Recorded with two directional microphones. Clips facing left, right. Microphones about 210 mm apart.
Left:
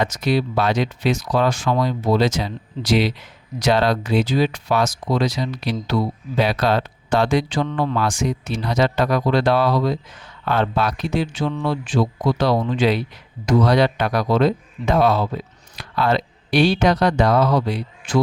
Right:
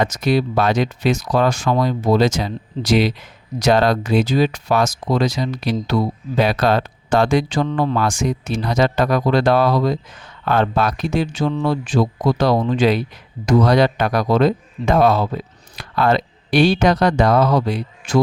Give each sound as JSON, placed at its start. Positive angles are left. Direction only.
{"t": 0.0, "sound": "speech", "side_deg": -45}